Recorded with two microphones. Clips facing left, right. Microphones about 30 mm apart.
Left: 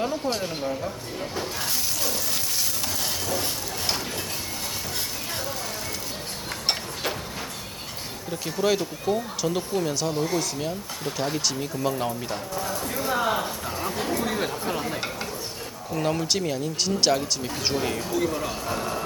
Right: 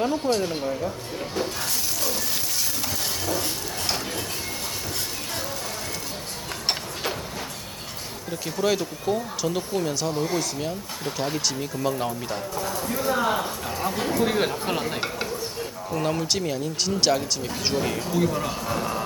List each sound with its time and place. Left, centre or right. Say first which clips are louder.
0.0 s speech: right 3 dB; centre
6.7 s a sound: even; centre
8.3 s speech: even; centre
14.3 s speech: right 3 dB; right
16.0 s speech: even; centre